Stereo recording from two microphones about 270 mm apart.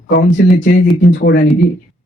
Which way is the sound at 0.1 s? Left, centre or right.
Left.